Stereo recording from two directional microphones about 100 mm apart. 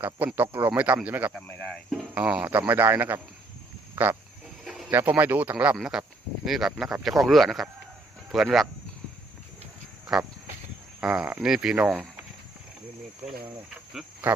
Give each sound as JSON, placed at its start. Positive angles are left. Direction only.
{"t": 0.3, "sound": "speech", "side_deg": -20}
{"t": 1.5, "sound": "speech", "side_deg": 15}
{"t": 2.1, "sound": "speech", "side_deg": -10}
{"t": 4.6, "sound": "bird", "side_deg": 0}
{"t": 4.9, "sound": "speech", "side_deg": -20}
{"t": 10.1, "sound": "speech", "side_deg": -5}